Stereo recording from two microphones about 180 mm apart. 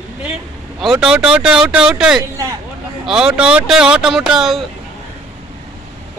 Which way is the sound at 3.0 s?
5° right (ahead or behind).